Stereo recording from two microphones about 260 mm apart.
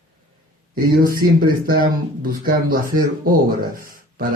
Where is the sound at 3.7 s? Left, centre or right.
Right.